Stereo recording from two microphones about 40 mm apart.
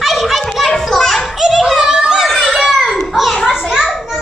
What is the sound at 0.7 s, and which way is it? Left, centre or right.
Children playing, centre.